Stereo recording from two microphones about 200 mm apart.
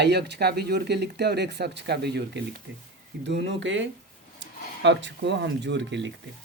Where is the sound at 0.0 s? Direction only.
55° right (ahead or behind).